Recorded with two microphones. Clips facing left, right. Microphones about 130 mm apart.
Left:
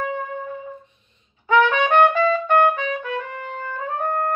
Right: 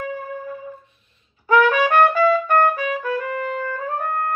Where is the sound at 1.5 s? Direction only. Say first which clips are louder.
Right 1 dB; 20° left (ahead or behind).